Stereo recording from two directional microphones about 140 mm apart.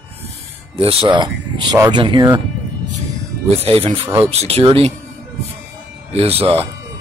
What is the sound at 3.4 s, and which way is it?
Speech, 45° right (ahead or behind).